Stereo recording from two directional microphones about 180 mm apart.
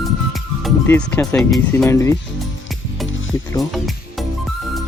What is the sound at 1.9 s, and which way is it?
Speech, 15° left (ahead or behind).